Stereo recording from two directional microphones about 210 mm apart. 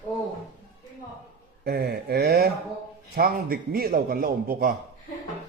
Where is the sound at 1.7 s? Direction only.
50° right (ahead or behind).